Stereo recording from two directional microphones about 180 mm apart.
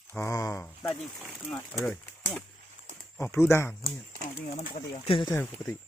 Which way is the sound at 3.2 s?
15° left (ahead or behind).